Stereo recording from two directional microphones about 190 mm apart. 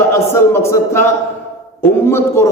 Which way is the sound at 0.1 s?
15° left (ahead or behind).